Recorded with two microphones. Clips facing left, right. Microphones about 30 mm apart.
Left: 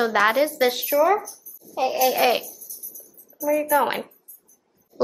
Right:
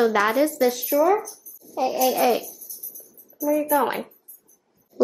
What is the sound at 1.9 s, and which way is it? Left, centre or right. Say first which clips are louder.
Speech: left 1 dB; centre.